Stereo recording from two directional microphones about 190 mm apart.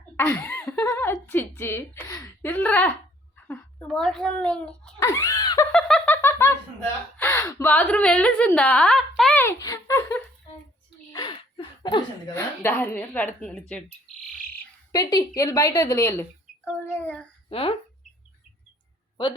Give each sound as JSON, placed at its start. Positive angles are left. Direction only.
{"t": 0.2, "sound": "a woman's voice", "side_deg": 10}
{"t": 4.9, "sound": "screaming", "side_deg": 15}
{"t": 5.7, "sound": "snicker", "side_deg": 5}
{"t": 7.2, "sound": "a woman's voice", "side_deg": 10}
{"t": 11.1, "sound": "a sound", "side_deg": 25}
{"t": 12.6, "sound": "a woman's voice", "side_deg": 10}
{"t": 14.9, "sound": "a woman's voice", "side_deg": 20}
{"t": 17.5, "sound": "speech", "side_deg": 30}